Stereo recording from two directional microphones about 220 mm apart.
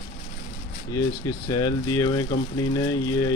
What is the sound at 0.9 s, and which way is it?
Speech, 15° left (ahead or behind).